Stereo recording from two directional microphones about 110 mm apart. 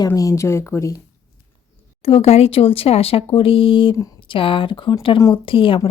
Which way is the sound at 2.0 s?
65° left (ahead or behind).